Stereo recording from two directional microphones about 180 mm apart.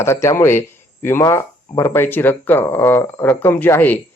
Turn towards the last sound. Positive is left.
turn(degrees=10)  # may be behind; listen again after turning